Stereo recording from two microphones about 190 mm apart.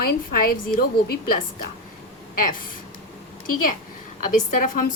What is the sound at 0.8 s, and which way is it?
Speech, 55° left (ahead or behind).